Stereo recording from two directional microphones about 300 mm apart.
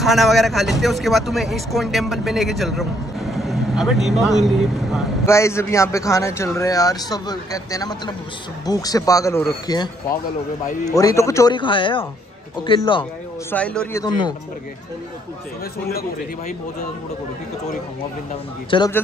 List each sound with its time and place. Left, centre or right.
0.0 s a man's voice: centre
13.5 s a man's voice: centre
15.9 s speech: left
18.7 s a man's voice: centre